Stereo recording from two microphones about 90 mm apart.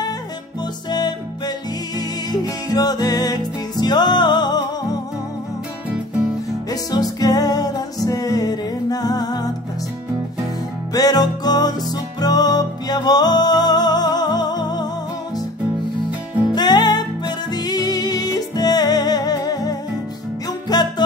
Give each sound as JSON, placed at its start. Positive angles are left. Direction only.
{"t": 0.8, "sound": "music", "side_deg": 50}
{"t": 6.7, "sound": "music", "side_deg": 45}
{"t": 10.9, "sound": "music", "side_deg": 45}
{"t": 16.5, "sound": "music", "side_deg": 55}